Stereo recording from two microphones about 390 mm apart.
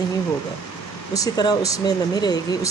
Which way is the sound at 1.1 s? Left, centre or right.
Centre.